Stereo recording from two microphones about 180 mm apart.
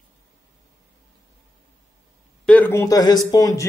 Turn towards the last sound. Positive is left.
turn(degrees=20)  # may be behind; listen again after turning